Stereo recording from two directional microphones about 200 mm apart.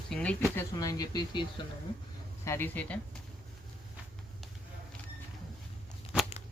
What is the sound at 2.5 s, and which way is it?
Speech, 10° left (ahead or behind).